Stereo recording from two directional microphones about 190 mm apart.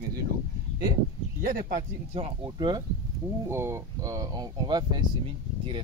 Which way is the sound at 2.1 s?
25° right (ahead or behind).